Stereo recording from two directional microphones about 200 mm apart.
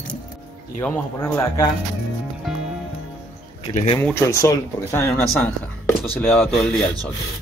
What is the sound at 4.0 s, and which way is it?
Speech, 10° left (ahead or behind).